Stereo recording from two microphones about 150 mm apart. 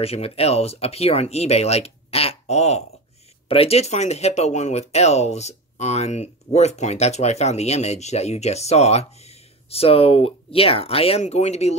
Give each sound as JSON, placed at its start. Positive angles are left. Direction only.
{"t": 0.0, "sound": "speech", "side_deg": 40}